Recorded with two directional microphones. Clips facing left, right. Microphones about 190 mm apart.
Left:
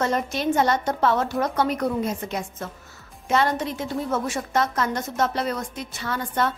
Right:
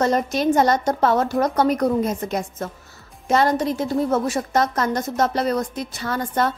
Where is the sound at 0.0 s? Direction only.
40° right (ahead or behind).